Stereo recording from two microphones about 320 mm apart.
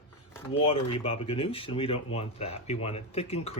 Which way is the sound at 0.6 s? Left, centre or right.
Centre.